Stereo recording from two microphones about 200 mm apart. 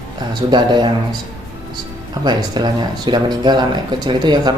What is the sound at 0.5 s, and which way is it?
Speech, 20° right (ahead or behind).